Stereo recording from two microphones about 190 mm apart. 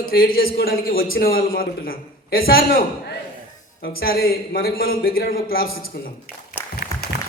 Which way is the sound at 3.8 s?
50° left (ahead or behind).